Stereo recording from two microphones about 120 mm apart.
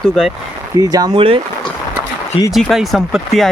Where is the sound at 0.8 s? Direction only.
30° right (ahead or behind).